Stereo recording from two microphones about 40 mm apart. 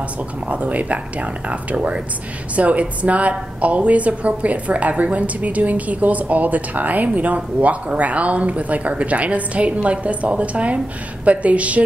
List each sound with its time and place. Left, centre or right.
0.5 s a woman's voice: right